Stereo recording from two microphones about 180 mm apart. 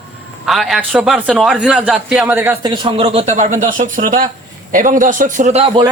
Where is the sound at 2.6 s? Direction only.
25° right (ahead or behind).